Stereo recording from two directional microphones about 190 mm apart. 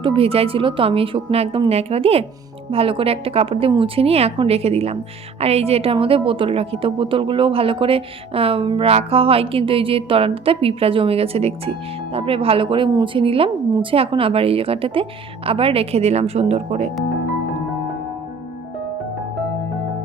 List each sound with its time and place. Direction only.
0.0 s a woman's voice: 30° right (ahead or behind)